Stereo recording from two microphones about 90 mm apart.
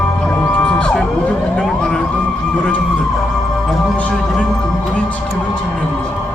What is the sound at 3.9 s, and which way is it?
Music, 10° left (ahead or behind).